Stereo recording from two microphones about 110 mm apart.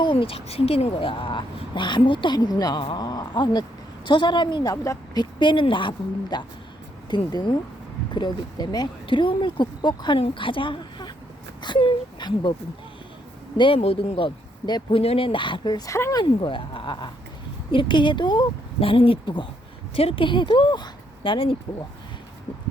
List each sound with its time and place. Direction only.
0.0 s speech: 50° left (ahead or behind)
4.7 s speech: 30° left (ahead or behind)
5.2 s speech: 45° left (ahead or behind)
13.6 s speech: 60° left (ahead or behind); by 15.8 s 45° left (ahead or behind)
15.9 s speech: 30° left (ahead or behind)
16.2 s speech: 50° left (ahead or behind)
18.8 s speech: 55° left (ahead or behind)
20.0 s speech: 55° left (ahead or behind)